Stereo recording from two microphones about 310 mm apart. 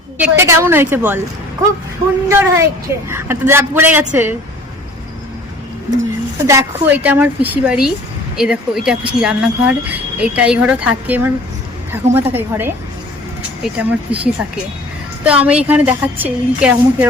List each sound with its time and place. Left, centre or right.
0.2 s a woman's voice: centre
2.3 s a woman's voice: centre
6.4 s a woman's voice: centre
15.2 s speech: centre